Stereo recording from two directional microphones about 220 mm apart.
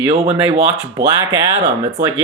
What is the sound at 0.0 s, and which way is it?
Speech, 25° right (ahead or behind).